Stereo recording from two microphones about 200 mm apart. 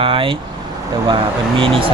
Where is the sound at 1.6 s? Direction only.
25° right (ahead or behind).